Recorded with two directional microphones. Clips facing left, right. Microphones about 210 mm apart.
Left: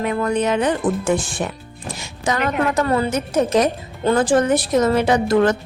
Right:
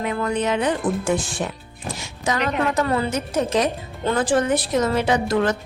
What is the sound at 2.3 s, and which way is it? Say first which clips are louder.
Speech: left 2 dB; 50° left (ahead or behind).